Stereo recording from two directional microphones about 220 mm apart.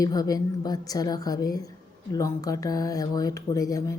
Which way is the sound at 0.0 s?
15° left (ahead or behind).